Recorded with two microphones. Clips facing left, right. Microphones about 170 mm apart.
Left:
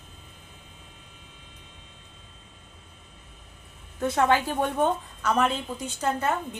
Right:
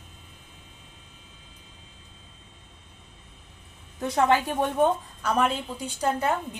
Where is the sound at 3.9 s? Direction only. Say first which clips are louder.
Even; 15° right (ahead or behind).